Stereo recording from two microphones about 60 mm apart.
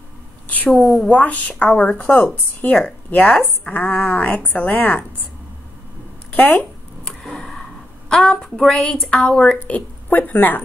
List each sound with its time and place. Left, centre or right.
0.7 s a woman's voice: centre
1.0 s speech: left
6.3 s speech: left
7.1 s a sound: centre
8.1 s a woman's voice: centre; by 10.6 s left